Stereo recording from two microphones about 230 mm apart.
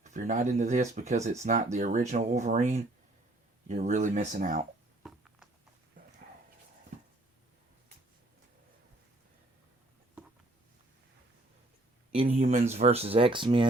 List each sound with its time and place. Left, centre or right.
0.0 s speech: right
5.0 s a sound: centre
12.1 s speech: right